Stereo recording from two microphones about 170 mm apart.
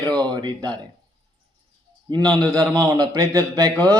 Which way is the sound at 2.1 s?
20° right (ahead or behind).